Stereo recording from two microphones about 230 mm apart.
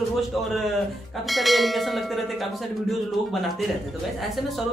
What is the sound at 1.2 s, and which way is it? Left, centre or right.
Speech, centre.